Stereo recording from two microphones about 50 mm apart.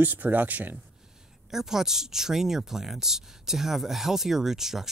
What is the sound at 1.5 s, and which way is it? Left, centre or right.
Speech, centre.